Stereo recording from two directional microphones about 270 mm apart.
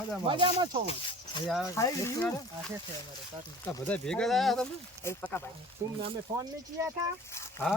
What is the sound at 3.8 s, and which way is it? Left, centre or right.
Speech, centre.